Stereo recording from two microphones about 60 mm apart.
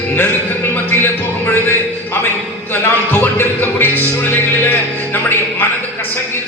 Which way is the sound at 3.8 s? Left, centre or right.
Left.